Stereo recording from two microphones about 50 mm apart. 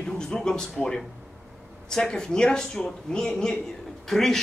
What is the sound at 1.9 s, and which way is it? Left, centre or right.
Speech, centre.